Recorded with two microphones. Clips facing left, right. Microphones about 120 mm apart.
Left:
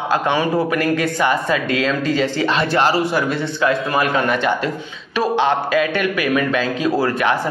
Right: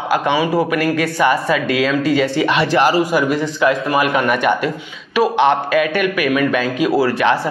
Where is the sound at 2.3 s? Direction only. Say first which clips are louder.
Right 3 dB; 15° right (ahead or behind).